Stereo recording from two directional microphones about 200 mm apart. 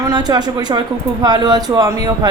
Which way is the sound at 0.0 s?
20° right (ahead or behind).